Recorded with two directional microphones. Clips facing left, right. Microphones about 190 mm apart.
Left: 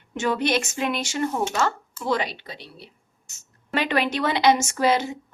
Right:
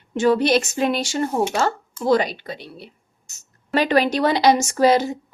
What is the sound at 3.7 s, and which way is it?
Speech, 40° right (ahead or behind).